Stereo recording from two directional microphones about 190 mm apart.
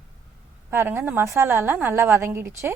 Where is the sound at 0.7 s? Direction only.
10° right (ahead or behind).